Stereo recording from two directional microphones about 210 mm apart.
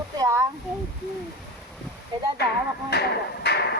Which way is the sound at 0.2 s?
15° right (ahead or behind).